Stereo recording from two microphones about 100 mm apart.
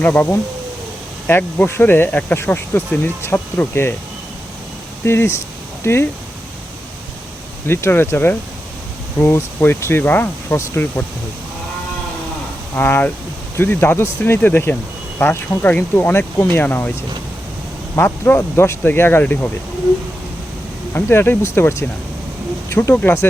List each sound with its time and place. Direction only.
0.0 s speech: 20° left (ahead or behind)
5.0 s speech: 25° left (ahead or behind)
7.7 s speech: 25° left (ahead or behind)
12.7 s speech: 20° left (ahead or behind)
20.9 s speech: 20° left (ahead or behind)